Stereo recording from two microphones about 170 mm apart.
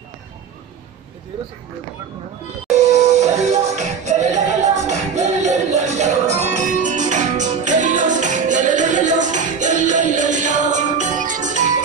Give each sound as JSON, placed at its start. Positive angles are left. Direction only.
{"t": 2.7, "sound": "music", "side_deg": -40}